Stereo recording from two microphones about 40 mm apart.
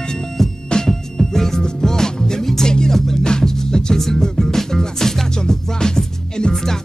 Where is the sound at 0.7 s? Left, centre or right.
Centre.